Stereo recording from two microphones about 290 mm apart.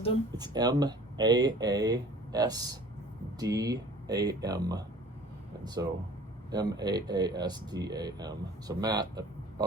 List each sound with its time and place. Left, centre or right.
0.3 s speech: centre